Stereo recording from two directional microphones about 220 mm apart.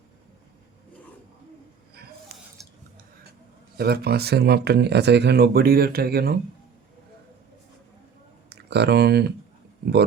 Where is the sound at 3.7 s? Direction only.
45° right (ahead or behind).